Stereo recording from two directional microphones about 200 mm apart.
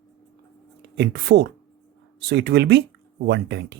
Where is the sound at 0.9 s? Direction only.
55° right (ahead or behind).